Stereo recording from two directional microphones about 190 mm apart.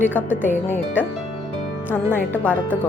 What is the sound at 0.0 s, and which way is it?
A woman's voice, 10° left (ahead or behind).